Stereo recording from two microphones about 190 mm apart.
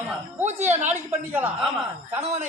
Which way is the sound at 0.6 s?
10° right (ahead or behind).